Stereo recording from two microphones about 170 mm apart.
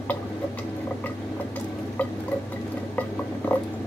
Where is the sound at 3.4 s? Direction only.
10° left (ahead or behind).